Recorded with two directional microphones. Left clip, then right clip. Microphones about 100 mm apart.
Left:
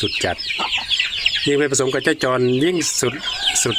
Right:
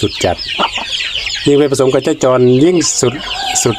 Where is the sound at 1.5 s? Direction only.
20° right (ahead or behind).